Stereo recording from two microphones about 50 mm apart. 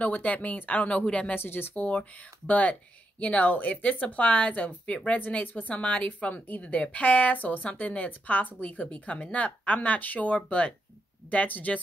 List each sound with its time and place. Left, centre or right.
0.0 s speech: left
1.3 s speech: left